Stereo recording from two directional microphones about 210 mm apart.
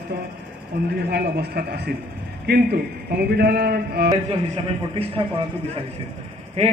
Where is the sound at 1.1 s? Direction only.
50° right (ahead or behind).